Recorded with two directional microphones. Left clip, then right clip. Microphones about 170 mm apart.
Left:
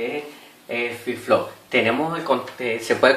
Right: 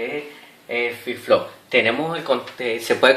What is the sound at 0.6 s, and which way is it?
Speech, 25° right (ahead or behind).